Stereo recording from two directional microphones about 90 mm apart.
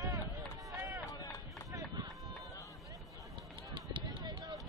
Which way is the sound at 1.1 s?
45° left (ahead or behind).